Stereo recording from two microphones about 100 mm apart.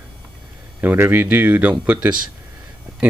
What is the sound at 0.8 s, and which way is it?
Speech, 20° right (ahead or behind).